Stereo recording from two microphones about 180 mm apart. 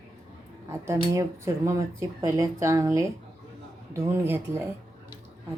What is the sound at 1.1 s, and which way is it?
Speech, 15° right (ahead or behind).